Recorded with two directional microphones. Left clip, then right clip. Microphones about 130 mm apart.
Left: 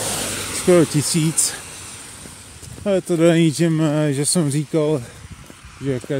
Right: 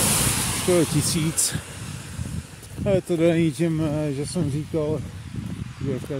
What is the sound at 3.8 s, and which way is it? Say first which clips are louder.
Speech: left 6 dB; 60° left (ahead or behind).